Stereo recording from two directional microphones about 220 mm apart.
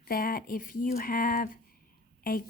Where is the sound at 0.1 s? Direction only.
40° left (ahead or behind).